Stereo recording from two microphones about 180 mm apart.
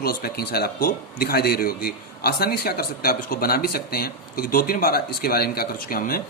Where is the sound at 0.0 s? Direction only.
55° left (ahead or behind).